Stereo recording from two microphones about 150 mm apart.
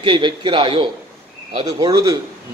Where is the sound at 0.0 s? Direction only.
35° right (ahead or behind).